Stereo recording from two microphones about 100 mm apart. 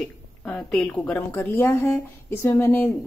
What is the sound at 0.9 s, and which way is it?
A woman's voice, 15° left (ahead or behind).